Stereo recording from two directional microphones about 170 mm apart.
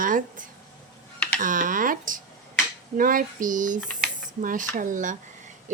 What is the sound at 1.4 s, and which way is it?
Speech, 50° right (ahead or behind).